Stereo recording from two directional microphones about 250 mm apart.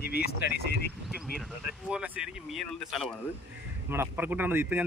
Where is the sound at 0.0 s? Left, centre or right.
Left.